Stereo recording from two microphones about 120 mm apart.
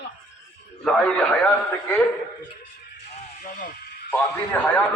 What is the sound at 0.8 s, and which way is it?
A man's voice, 5° left (ahead or behind).